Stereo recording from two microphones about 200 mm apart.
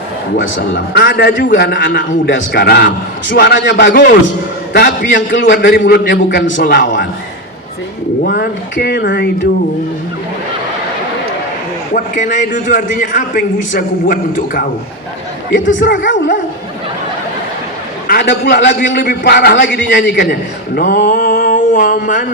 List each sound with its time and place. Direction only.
0.3 s a man's voice: 65° left (ahead or behind)
4.7 s speech: 45° left (ahead or behind)
5.1 s a man's voice: 65° left (ahead or behind)
8.2 s speech: 50° left (ahead or behind)
11.9 s a man's voice: 40° left (ahead or behind)
15.9 s speech: 70° left (ahead or behind)
18.1 s a man's voice: 55° left (ahead or behind)